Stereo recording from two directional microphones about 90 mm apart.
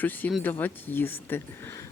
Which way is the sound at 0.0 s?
20° left (ahead or behind).